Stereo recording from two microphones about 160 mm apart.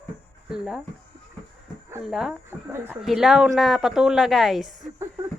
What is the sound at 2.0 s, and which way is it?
A woman's voice, 5° right (ahead or behind).